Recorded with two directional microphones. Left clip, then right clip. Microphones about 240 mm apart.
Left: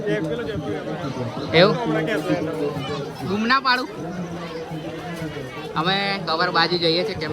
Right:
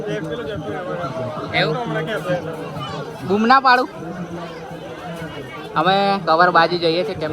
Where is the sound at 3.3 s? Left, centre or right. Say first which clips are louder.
Right 6 dB; centre.